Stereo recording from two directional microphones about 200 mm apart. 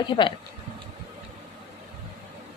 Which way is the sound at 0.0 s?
25° left (ahead or behind).